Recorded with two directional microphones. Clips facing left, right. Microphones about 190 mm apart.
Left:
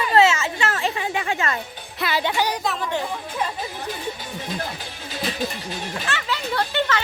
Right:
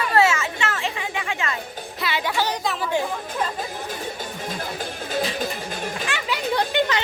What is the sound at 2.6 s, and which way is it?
Speech, 5° right (ahead or behind).